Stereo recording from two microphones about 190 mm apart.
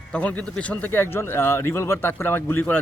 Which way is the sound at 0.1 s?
5° left (ahead or behind).